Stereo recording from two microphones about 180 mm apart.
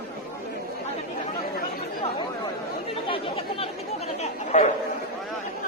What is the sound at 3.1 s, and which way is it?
Chatter, 30° left (ahead or behind).